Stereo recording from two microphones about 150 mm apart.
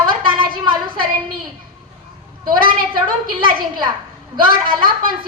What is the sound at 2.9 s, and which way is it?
A woman's voice, 30° right (ahead or behind).